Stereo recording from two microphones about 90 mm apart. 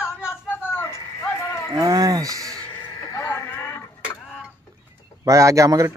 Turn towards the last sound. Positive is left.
turn(degrees=-35)  # may be behind; listen again after turning